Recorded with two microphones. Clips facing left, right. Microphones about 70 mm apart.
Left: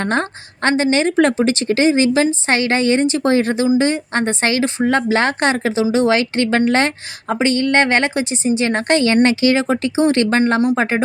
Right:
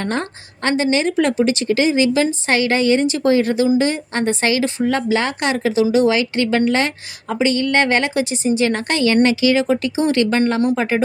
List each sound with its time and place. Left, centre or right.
0.0 s speech: left